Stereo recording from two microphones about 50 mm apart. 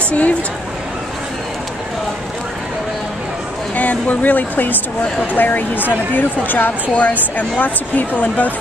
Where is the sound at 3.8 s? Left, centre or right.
Left.